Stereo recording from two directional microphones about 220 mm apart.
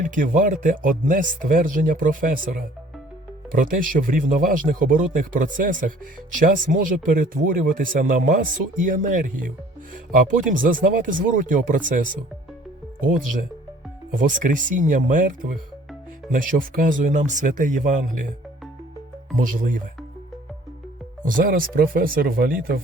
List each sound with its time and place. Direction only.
0.0 s speech: 35° right (ahead or behind)
3.5 s speech: 40° right (ahead or behind)
14.1 s speech: 35° right (ahead or behind)
19.4 s speech: 35° right (ahead or behind)
21.2 s speech: 40° right (ahead or behind)